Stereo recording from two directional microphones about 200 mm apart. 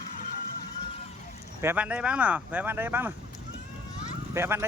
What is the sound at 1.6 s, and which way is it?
Speech, 10° right (ahead or behind).